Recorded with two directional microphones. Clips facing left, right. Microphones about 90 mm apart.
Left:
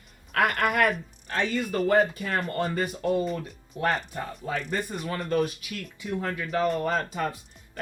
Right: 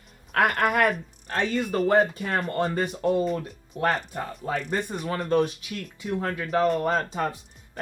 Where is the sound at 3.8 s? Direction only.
55° right (ahead or behind).